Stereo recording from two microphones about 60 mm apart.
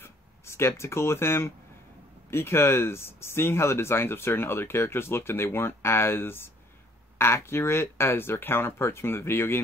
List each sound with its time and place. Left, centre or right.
0.0 s speech: left